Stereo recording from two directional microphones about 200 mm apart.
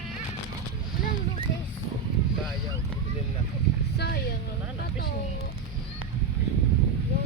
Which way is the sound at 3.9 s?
55° left (ahead or behind).